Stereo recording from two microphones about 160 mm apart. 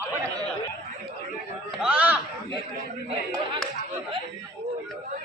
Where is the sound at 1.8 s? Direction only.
10° right (ahead or behind).